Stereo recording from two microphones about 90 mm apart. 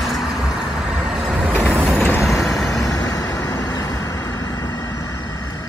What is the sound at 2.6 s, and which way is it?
Vehicle, 40° left (ahead or behind).